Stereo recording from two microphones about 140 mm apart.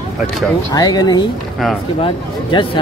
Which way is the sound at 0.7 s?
30° left (ahead or behind).